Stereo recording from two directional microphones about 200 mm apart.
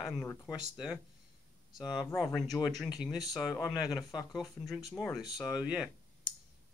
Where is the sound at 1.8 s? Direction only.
20° left (ahead or behind).